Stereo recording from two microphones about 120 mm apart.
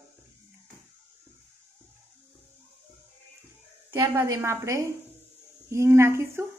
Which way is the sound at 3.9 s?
25° right (ahead or behind).